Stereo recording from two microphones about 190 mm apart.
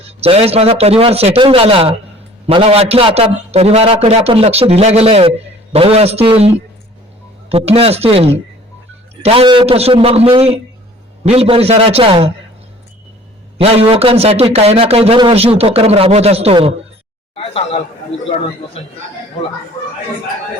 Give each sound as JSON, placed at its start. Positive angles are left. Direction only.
{"t": 0.0, "sound": "speech", "side_deg": -30}
{"t": 7.5, "sound": "speech", "side_deg": -30}
{"t": 13.8, "sound": "speech", "side_deg": -30}
{"t": 17.3, "sound": "a man's voice", "side_deg": 30}
{"t": 18.8, "sound": "a man's voice", "side_deg": 30}